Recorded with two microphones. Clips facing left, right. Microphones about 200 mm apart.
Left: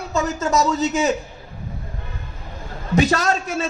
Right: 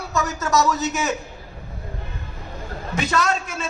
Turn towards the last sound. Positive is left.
turn(degrees=40)  # may be behind; listen again after turning